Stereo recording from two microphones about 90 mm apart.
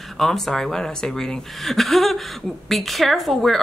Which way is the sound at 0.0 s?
Centre (ahead or behind).